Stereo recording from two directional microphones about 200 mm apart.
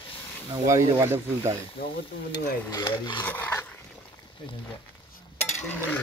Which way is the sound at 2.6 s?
15° left (ahead or behind).